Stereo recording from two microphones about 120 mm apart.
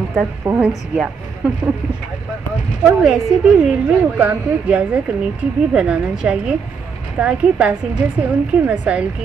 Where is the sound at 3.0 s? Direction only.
5° right (ahead or behind).